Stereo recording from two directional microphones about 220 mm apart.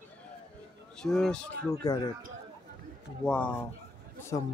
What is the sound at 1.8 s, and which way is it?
Speech, 15° left (ahead or behind).